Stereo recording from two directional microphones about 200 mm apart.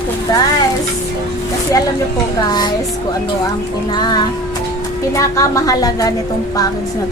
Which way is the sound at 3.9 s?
20° left (ahead or behind).